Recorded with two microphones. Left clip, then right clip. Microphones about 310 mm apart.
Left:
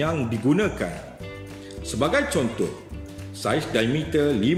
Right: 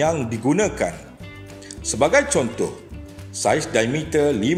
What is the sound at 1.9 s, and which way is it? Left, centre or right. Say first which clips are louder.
Speech: right 5 dB; centre.